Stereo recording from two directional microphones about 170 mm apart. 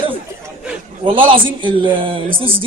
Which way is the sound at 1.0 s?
30° right (ahead or behind).